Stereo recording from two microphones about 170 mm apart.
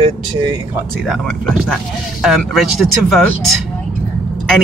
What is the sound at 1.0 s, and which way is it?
Speech, 5° left (ahead or behind).